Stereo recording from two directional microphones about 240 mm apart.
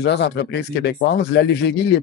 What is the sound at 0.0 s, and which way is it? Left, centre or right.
Speech, left.